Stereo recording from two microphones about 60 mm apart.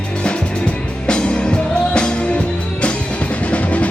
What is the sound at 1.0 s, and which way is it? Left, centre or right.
Music, centre.